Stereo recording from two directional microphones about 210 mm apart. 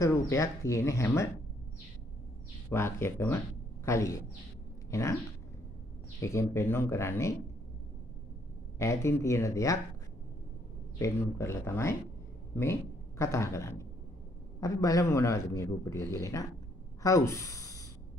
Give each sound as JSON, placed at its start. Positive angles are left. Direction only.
{"t": 0.0, "sound": "a man's voice", "side_deg": 15}
{"t": 2.7, "sound": "a man's voice", "side_deg": 10}
{"t": 6.2, "sound": "a man's voice", "side_deg": 15}
{"t": 8.7, "sound": "a man's voice", "side_deg": 15}
{"t": 11.0, "sound": "a man's voice", "side_deg": 15}
{"t": 13.2, "sound": "a man's voice", "side_deg": 15}